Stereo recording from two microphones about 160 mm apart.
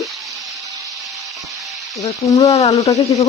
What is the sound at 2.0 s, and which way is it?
Speech, 20° left (ahead or behind).